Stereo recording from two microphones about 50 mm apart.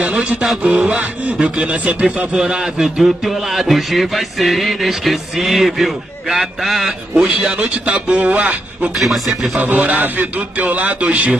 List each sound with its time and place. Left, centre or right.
0.0 s a man's voice: right
2.3 s speech: centre
7.2 s a man's voice: right
8.9 s speech: centre
9.6 s a man's voice: right